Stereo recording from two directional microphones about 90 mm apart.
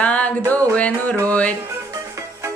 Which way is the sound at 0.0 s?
15° left (ahead or behind).